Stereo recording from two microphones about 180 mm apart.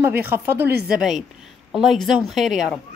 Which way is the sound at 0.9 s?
Centre (ahead or behind).